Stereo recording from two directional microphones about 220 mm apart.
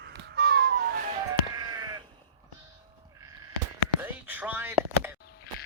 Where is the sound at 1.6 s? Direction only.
15° right (ahead or behind).